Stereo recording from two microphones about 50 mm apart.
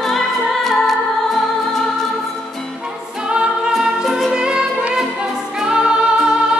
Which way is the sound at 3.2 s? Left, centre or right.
Centre.